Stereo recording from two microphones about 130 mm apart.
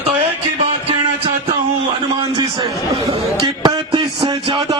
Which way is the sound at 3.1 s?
35° right (ahead or behind).